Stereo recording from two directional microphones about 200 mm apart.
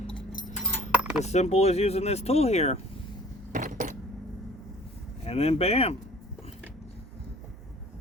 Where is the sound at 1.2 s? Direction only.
35° left (ahead or behind).